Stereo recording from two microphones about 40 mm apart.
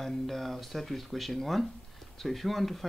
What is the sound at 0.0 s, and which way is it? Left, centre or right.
Speech, centre.